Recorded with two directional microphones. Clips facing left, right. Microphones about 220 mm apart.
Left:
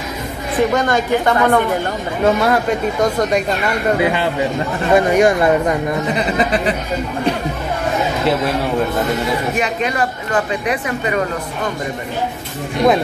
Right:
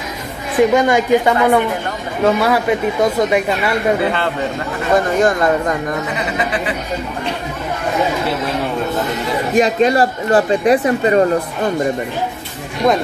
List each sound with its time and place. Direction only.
0.7 s a woman's voice: 10° right (ahead or behind)
4.0 s speech: 15° left (ahead or behind)
6.1 s speech: 35° left (ahead or behind)
9.6 s speech: 35° right (ahead or behind)